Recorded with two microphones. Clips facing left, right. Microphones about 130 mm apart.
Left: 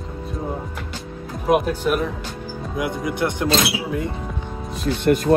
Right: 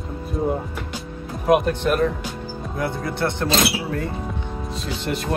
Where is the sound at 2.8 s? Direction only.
15° left (ahead or behind).